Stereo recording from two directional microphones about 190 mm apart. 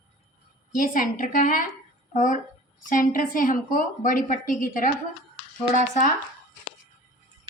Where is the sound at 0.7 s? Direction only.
45° left (ahead or behind).